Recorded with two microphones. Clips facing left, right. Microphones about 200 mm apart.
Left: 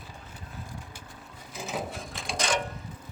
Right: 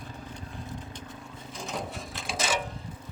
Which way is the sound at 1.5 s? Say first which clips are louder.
Left 2 dB; 5° left (ahead or behind).